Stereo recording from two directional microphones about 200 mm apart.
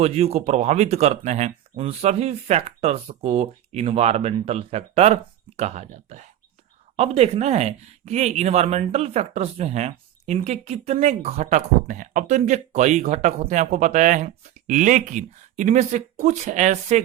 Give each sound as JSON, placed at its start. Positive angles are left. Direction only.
{"t": 0.0, "sound": "speech", "side_deg": -30}